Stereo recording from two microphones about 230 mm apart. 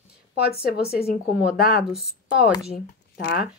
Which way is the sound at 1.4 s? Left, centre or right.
Left.